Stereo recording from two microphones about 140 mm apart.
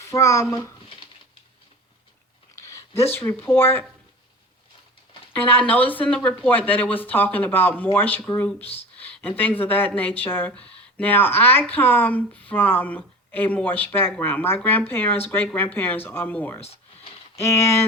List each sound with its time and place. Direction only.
0.0 s a child's voice: 20° left (ahead or behind)
2.6 s a sound: 20° left (ahead or behind)
3.1 s speech: 15° left (ahead or behind)
5.3 s speech: 10° left (ahead or behind)
16.6 s a sound: 50° left (ahead or behind)
17.3 s speech: 20° left (ahead or behind)